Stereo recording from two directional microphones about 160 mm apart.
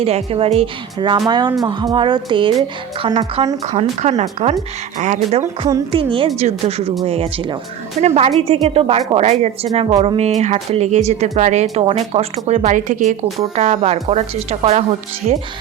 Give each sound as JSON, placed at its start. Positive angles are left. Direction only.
{"t": 0.0, "sound": "a woman's voice", "side_deg": -35}
{"t": 5.4, "sound": "a woman's voice", "side_deg": -20}
{"t": 5.9, "sound": "a woman's voice", "side_deg": -35}